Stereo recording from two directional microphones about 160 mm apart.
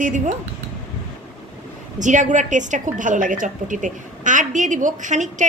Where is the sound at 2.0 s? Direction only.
50° right (ahead or behind).